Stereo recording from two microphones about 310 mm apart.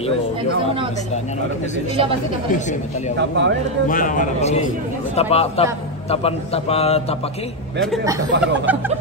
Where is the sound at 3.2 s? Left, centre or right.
Right.